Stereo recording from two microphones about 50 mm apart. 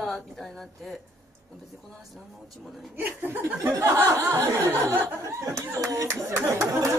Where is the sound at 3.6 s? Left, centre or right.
Right.